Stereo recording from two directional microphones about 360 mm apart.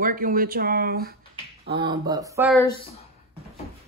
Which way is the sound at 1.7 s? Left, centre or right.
Centre.